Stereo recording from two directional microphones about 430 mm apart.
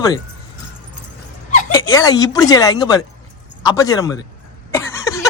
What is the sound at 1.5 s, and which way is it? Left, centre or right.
Speech, centre.